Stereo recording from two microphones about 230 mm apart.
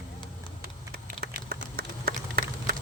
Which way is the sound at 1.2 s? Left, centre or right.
Right.